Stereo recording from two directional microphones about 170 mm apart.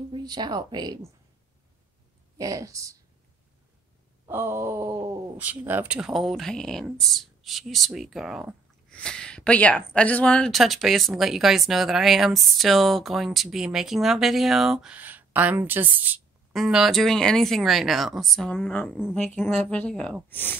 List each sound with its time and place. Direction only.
0.1 s speech: 25° right (ahead or behind)
2.3 s speech: 20° right (ahead or behind)
4.3 s speech: 15° right (ahead or behind); by 20.5 s 10° left (ahead or behind)